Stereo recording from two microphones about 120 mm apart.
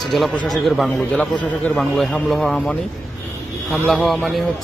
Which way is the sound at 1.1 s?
10° left (ahead or behind).